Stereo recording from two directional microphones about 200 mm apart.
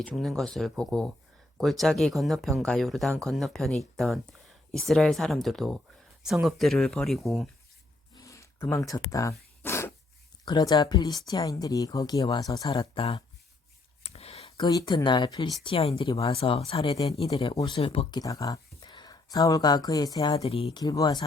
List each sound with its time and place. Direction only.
0.0 s speech: 5° left (ahead or behind)
8.1 s a sound: 15° left (ahead or behind)
9.0 s speech: 15° left (ahead or behind)
9.6 s dog: 15° left (ahead or behind)
10.4 s speech: 20° left (ahead or behind)
12.7 s speech: 30° left (ahead or behind)
14.0 s a sound: 30° left (ahead or behind)
15.6 s speech: 30° left (ahead or behind)
20.3 s speech: 30° left (ahead or behind)